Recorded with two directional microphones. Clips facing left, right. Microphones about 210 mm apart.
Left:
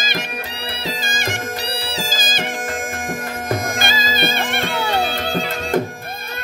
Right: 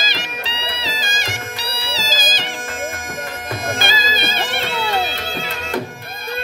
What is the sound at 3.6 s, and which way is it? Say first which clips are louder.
Music: even; 50° left (ahead or behind).